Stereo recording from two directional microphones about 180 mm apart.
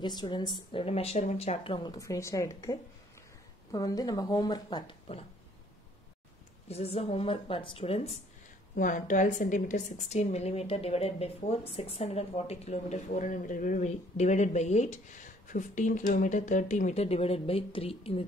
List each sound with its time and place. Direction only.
0.0 s a woman's voice: 25° left (ahead or behind)
6.7 s a woman's voice: 35° left (ahead or behind)
8.7 s a woman's voice: 45° left (ahead or behind)